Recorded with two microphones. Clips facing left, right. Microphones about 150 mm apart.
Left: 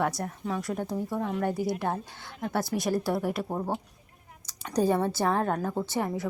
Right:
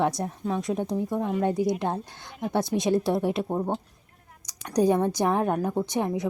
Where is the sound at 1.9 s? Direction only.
20° right (ahead or behind).